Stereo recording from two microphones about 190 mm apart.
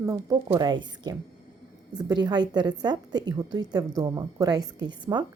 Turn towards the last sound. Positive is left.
turn(degrees=-25)  # may be behind; listen again after turning